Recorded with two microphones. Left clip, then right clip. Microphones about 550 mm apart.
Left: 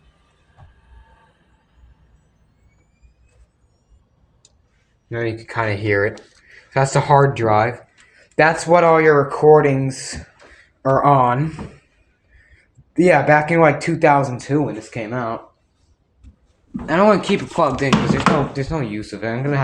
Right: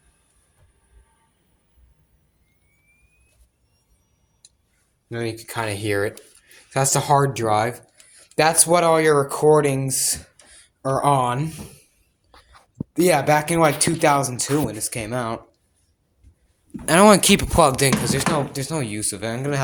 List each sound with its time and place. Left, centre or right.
5.0 s speech: right
12.9 s speech: right
14.3 s chopping: right
16.8 s chopping: right